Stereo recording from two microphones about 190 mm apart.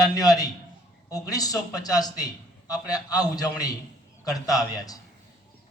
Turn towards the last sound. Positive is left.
turn(degrees=20)  # may be behind; listen again after turning